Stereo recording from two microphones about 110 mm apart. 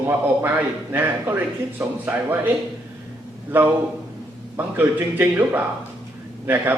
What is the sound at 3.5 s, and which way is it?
Speech, 15° right (ahead or behind).